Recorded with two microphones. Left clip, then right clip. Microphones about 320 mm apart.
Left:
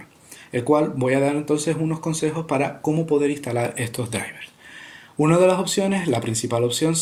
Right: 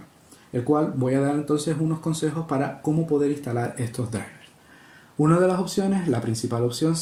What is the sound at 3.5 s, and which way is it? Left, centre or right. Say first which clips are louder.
Speech: left 4 dB; left.